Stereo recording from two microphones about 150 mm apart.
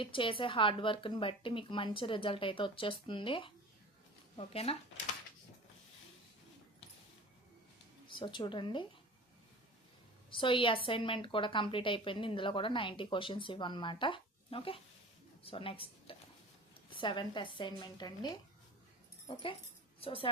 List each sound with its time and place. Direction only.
0.0 s a woman's voice: 35° left (ahead or behind)
8.0 s a woman's voice: 35° left (ahead or behind)
10.2 s a woman's voice: 35° left (ahead or behind)
19.3 s a woman's voice: 35° left (ahead or behind)